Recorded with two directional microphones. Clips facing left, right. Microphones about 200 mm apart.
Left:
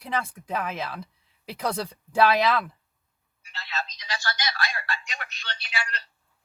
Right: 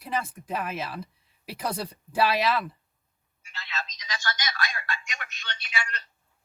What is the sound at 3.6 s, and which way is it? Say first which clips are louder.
Telephone: left 3 dB; 35° left (ahead or behind).